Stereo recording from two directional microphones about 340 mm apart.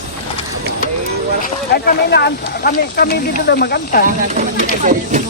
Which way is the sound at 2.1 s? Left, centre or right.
Left.